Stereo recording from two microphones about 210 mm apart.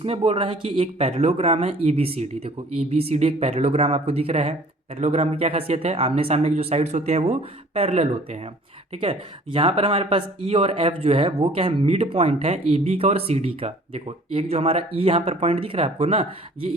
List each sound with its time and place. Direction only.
0.0 s speech: 25° right (ahead or behind)